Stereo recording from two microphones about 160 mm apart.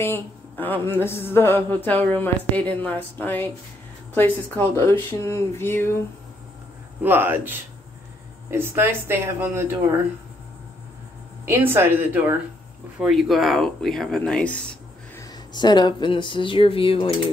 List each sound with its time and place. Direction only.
0.0 s a sound: 15° left (ahead or behind)
7.0 s speech: 10° right (ahead or behind)
11.4 s speech: 15° right (ahead or behind)
13.0 s speech: centre (ahead or behind)
15.5 s speech: 25° left (ahead or behind)